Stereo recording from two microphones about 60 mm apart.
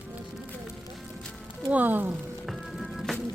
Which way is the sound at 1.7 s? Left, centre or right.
Right.